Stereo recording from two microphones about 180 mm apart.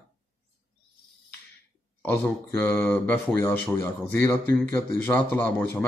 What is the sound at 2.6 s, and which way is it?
Speech, 10° left (ahead or behind).